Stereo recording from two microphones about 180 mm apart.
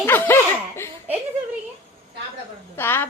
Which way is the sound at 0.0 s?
10° left (ahead or behind).